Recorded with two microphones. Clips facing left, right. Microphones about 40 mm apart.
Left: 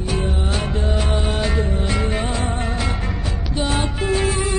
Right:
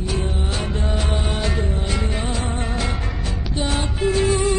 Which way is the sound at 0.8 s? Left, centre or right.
Left.